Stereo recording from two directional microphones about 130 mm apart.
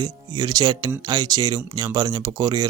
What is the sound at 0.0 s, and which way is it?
Speech, 30° right (ahead or behind).